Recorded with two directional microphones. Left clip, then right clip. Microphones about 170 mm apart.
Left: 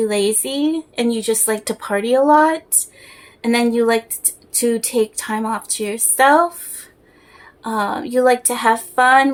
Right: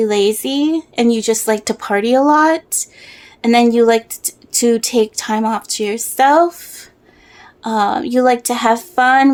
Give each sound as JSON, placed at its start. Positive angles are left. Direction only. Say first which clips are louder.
{"t": 0.0, "sound": "speech", "louder": "right 4 dB", "side_deg": -40}
{"t": 7.6, "sound": "speech", "louder": "right 5 dB", "side_deg": -45}